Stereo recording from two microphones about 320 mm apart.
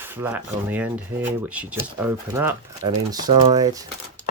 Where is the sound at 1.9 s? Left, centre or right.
Centre.